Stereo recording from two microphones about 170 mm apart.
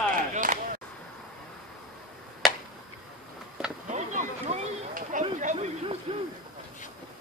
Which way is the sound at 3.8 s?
45° right (ahead or behind).